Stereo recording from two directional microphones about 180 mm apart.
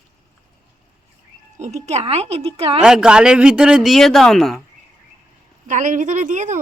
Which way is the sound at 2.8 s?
5° right (ahead or behind).